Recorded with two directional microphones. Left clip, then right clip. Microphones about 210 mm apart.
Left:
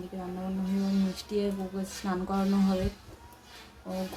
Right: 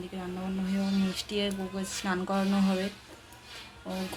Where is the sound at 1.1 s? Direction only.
Centre (ahead or behind).